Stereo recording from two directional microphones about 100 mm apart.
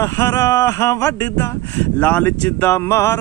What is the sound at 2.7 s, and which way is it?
Mantra, 30° left (ahead or behind).